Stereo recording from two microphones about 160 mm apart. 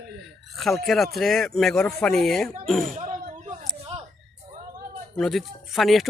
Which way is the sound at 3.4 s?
45° right (ahead or behind).